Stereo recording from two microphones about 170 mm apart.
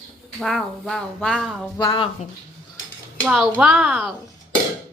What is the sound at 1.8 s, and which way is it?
Speech, 25° left (ahead or behind).